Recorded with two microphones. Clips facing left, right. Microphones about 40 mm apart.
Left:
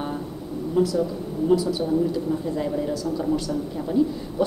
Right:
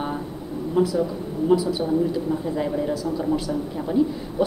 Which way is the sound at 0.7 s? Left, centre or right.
Centre.